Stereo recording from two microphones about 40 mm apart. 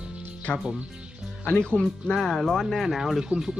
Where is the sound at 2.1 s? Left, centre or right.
Centre.